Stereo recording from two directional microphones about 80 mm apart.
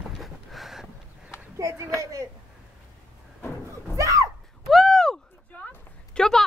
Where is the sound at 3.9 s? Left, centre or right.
Right.